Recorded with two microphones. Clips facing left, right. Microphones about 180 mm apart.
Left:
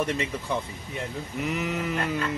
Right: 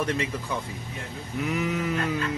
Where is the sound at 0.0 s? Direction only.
Centre (ahead or behind).